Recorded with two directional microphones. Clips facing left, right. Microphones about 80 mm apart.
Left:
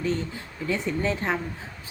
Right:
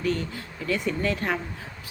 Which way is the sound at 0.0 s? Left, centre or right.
Left.